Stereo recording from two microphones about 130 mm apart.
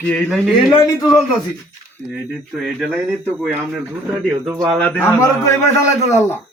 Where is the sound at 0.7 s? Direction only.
25° left (ahead or behind).